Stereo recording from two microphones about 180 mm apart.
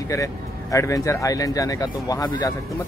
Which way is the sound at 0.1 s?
15° left (ahead or behind).